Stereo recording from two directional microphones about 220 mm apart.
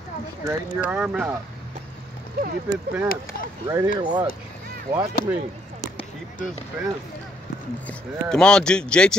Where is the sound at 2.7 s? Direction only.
10° right (ahead or behind).